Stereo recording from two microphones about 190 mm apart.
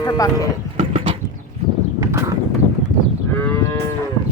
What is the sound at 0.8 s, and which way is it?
Clip-clop, 30° right (ahead or behind).